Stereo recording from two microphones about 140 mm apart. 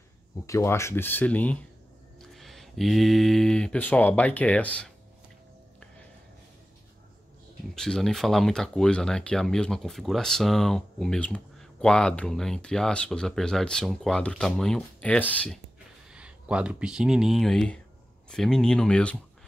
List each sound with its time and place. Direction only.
0.5 s speech: 20° left (ahead or behind)
7.7 s speech: 5° left (ahead or behind)
16.1 s speech: 10° right (ahead or behind)